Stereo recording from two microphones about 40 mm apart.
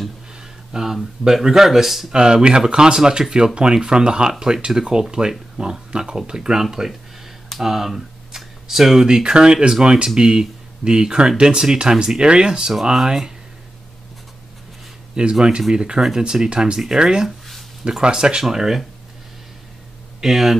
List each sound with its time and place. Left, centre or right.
0.4 s a sound: centre
1.2 s speech: centre
2.1 s speech: right
7.4 s a sound: centre
9.0 s speech: right
15.3 s speech: right
20.2 s speech: centre